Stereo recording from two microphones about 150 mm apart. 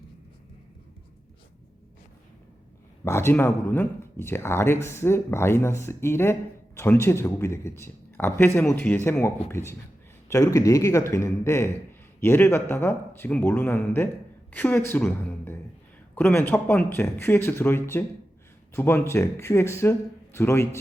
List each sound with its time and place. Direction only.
3.0 s speech: 15° left (ahead or behind)